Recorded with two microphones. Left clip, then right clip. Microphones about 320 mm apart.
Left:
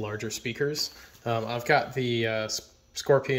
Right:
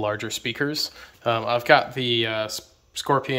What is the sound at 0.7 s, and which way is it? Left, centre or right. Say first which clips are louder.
Speech: right 3 dB; centre.